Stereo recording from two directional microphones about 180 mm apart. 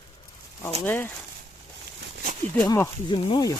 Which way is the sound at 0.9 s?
10° left (ahead or behind).